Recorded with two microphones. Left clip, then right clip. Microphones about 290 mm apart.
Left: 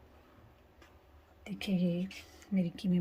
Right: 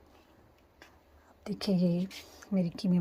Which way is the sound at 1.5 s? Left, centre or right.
Centre.